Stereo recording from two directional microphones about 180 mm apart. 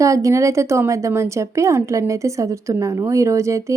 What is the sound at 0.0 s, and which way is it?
A woman's voice, 15° right (ahead or behind).